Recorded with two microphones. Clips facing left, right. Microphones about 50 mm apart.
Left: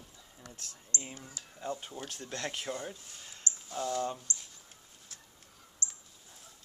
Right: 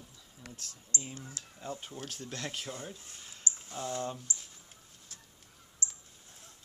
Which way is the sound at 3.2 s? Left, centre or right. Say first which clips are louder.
Right 1 dB; centre.